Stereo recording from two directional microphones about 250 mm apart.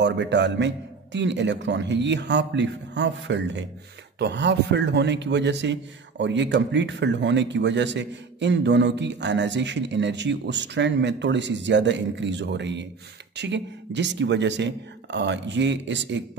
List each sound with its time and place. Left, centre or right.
0.0 s a man's voice: right